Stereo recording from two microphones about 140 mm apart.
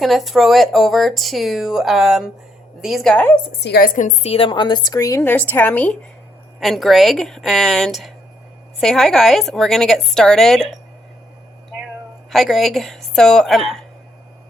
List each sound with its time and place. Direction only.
0.0 s speech: centre (ahead or behind)
3.8 s a woman's voice: 75° left (ahead or behind)
4.3 s a woman's voice: 40° left (ahead or behind); by 6.0 s 10° left (ahead or behind)
6.6 s speech: centre (ahead or behind)
12.3 s speech: centre (ahead or behind)